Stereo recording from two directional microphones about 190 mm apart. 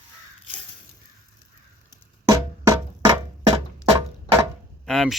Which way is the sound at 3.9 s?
30° right (ahead or behind).